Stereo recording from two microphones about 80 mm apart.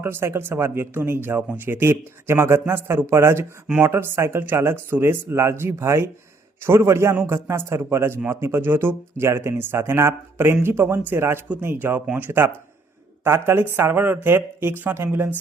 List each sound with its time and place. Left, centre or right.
0.0 s speech: right